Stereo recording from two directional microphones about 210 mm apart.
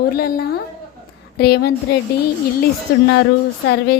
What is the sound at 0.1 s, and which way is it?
A woman's voice, 45° left (ahead or behind).